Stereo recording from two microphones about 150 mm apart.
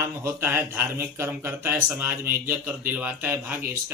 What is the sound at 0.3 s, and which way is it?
Speech, 15° right (ahead or behind).